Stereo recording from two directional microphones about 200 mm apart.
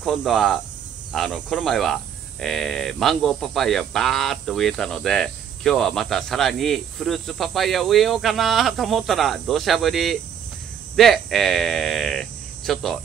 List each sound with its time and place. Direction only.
0.0 s speech: centre (ahead or behind)